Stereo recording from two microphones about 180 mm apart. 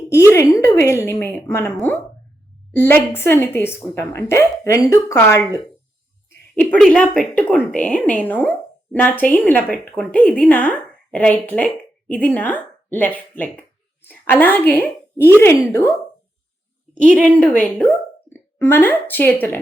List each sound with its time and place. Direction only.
0.3 s a woman's voice: 15° left (ahead or behind)
2.7 s a woman's voice: 10° left (ahead or behind)
6.6 s a woman's voice: 5° left (ahead or behind)
16.9 s a woman's voice: 45° right (ahead or behind)
17.3 s a woman's voice: 10° left (ahead or behind)